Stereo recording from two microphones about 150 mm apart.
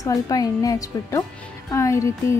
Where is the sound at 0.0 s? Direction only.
25° left (ahead or behind).